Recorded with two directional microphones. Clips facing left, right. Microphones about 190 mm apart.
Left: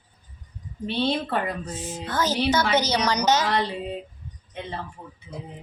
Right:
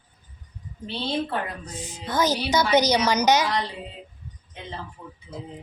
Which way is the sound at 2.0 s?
15° right (ahead or behind).